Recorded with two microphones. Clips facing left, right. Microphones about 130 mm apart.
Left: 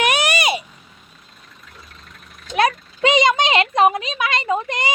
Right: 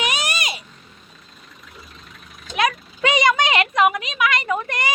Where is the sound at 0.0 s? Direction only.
60° left (ahead or behind).